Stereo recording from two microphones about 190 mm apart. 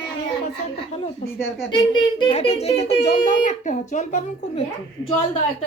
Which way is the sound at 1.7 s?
25° left (ahead or behind).